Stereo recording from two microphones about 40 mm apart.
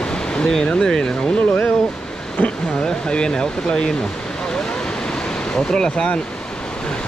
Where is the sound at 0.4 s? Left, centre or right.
Centre.